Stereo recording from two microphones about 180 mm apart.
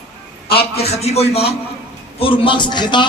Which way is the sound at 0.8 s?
35° left (ahead or behind).